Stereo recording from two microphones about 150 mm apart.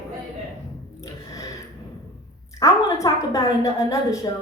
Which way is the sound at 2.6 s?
20° left (ahead or behind).